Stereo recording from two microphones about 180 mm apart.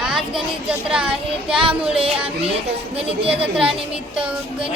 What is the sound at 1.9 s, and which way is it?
Music, 30° right (ahead or behind).